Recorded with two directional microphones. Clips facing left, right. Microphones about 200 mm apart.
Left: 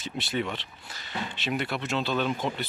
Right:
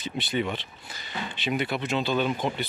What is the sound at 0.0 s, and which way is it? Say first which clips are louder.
Speech: right 2 dB; centre (ahead or behind).